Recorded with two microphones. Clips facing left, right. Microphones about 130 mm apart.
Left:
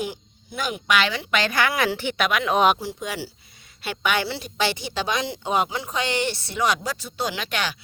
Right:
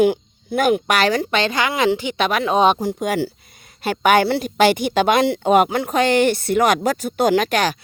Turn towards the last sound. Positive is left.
turn(degrees=-45)  # may be behind; listen again after turning